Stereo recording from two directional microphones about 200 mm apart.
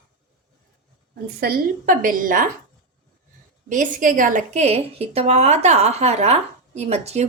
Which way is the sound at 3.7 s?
40° right (ahead or behind).